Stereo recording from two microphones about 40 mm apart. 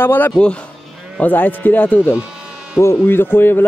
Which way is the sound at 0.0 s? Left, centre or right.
Left.